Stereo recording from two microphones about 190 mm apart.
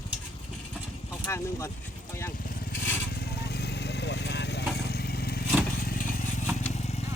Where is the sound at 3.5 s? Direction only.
60° left (ahead or behind).